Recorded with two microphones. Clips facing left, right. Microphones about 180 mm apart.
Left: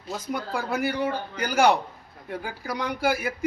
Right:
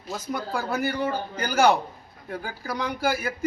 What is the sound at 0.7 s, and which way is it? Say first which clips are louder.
A man's voice: left 1 dB; 10° left (ahead or behind).